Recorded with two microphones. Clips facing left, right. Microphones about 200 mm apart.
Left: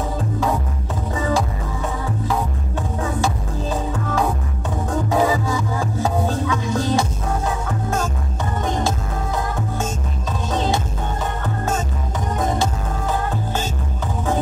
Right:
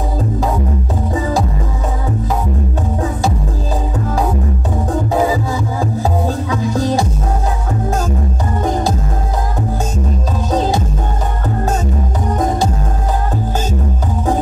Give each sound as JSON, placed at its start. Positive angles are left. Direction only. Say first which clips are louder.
{"t": 6.2, "sound": "music", "louder": "right 3 dB", "side_deg": -40}